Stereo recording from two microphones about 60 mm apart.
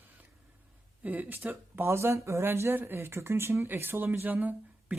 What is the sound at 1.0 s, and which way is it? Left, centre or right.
Speech, right.